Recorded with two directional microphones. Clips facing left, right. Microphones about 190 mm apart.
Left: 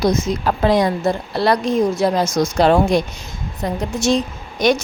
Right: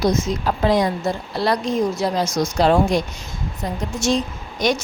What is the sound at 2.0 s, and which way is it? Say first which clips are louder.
A woman's voice: left 4 dB; 50° left (ahead or behind).